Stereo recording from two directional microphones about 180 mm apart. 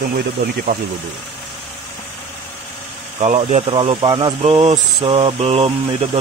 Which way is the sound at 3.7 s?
30° right (ahead or behind).